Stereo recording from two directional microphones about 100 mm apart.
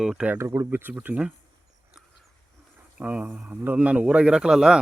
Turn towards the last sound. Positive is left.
turn(degrees=-5)  # may be behind; listen again after turning